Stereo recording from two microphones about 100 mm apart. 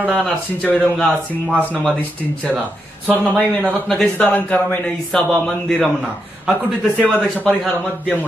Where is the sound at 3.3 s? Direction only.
15° right (ahead or behind).